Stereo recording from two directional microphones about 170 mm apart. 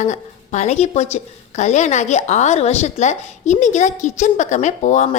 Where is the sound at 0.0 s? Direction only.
45° left (ahead or behind).